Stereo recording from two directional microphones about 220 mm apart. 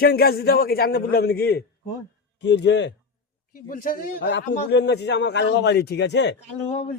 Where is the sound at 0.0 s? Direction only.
45° left (ahead or behind).